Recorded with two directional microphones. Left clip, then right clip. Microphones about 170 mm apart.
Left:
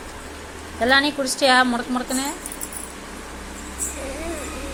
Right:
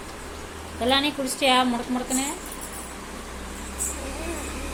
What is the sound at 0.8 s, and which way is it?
Speech, 15° left (ahead or behind).